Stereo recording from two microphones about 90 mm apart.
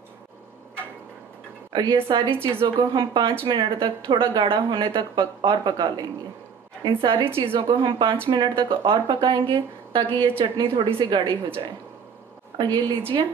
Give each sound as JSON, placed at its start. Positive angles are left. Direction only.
{"t": 1.7, "sound": "a woman's voice", "side_deg": -55}
{"t": 2.0, "sound": "a woman's voice", "side_deg": -75}
{"t": 2.3, "sound": "a woman's voice", "side_deg": -25}
{"t": 2.8, "sound": "speech", "side_deg": -55}
{"t": 7.3, "sound": "speech", "side_deg": -75}
{"t": 9.5, "sound": "a woman's voice", "side_deg": -70}